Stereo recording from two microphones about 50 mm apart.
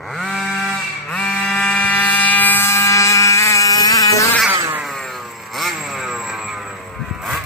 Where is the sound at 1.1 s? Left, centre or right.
Left.